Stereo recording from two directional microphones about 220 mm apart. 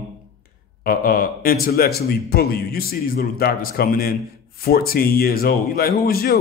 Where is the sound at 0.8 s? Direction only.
40° left (ahead or behind).